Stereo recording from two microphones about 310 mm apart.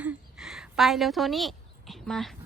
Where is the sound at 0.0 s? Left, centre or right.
Centre.